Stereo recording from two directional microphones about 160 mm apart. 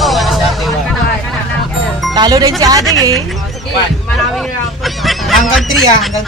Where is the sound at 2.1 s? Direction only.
25° right (ahead or behind).